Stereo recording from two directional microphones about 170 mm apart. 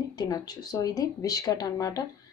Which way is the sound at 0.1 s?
25° left (ahead or behind).